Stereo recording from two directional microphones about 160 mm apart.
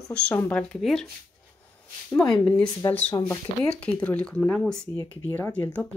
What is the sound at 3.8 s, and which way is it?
Speech, 10° left (ahead or behind).